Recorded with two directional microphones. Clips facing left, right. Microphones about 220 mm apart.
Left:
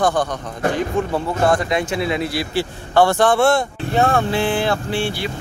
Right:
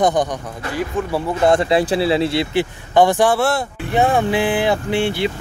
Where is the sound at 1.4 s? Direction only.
25° right (ahead or behind); by 3.7 s 5° right (ahead or behind).